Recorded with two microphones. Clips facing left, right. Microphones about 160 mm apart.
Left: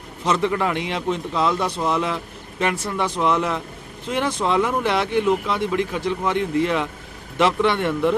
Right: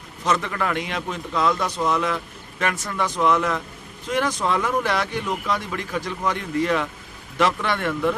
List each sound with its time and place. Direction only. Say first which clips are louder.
0.3 s speech: left 3 dB; 25° left (ahead or behind)